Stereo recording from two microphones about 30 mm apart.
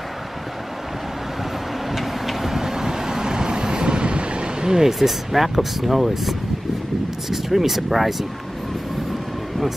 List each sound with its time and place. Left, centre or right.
1.9 s vehicle: centre; by 4.8 s right
4.8 s speech: centre